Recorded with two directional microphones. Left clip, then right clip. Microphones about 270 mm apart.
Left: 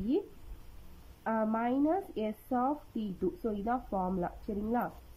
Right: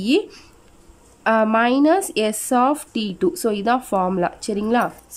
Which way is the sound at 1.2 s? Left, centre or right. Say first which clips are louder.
Right 16 dB; right.